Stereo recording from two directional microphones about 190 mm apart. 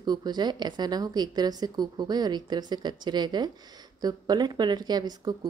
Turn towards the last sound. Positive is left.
turn(degrees=-20)  # may be behind; listen again after turning